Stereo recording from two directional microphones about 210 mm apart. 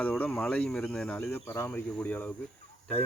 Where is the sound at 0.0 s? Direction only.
5° left (ahead or behind).